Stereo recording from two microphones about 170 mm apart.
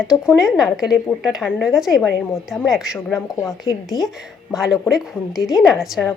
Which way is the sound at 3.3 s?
20° left (ahead or behind).